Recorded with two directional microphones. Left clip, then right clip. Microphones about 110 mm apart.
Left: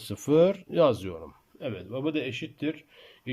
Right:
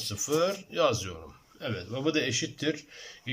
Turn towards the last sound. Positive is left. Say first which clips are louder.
# right 1 dB
turn(degrees=35)  # may be behind; listen again after turning